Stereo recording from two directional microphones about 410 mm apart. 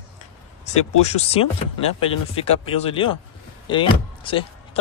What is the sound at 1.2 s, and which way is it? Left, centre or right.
Speech, centre.